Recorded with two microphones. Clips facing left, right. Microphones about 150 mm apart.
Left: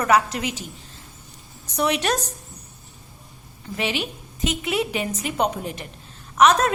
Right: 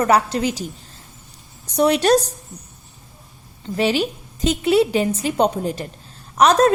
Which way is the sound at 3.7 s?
35° right (ahead or behind).